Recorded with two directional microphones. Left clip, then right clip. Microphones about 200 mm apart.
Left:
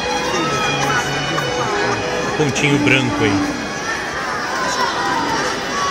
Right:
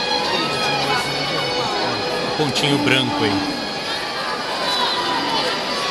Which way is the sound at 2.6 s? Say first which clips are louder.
Left 2 dB; 20° right (ahead or behind).